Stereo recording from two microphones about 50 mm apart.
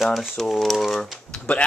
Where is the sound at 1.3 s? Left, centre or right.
Centre.